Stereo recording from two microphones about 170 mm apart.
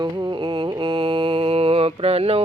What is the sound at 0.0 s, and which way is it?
Mantra, 25° right (ahead or behind).